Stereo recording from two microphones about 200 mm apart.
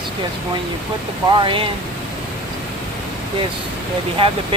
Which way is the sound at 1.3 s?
25° right (ahead or behind).